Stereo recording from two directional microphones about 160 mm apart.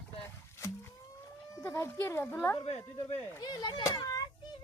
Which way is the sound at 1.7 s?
15° left (ahead or behind).